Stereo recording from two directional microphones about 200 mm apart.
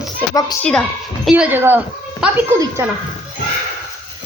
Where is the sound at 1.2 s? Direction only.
5° right (ahead or behind).